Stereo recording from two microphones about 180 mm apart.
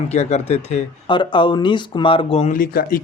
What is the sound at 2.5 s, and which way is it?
Speech, 55° left (ahead or behind).